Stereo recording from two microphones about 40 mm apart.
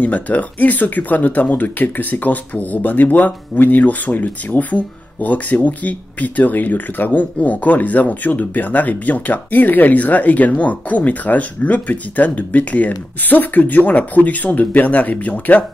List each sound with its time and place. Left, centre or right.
0.0 s speech: left